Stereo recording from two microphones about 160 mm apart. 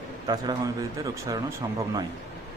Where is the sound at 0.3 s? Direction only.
25° right (ahead or behind).